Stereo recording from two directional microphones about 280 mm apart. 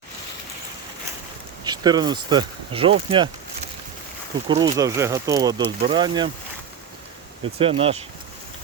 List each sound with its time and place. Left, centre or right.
1.6 s speech: centre
4.4 s speech: centre
7.6 s speech: centre